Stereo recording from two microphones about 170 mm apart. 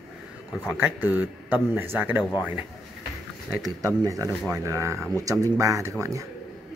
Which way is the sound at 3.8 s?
20° right (ahead or behind).